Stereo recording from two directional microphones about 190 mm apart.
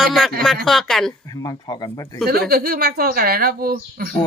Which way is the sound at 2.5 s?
55° right (ahead or behind).